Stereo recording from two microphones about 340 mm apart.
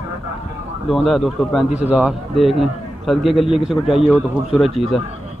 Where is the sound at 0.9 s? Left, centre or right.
Centre.